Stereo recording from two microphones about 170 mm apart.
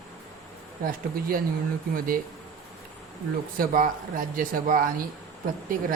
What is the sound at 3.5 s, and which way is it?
Speech, 55° right (ahead or behind).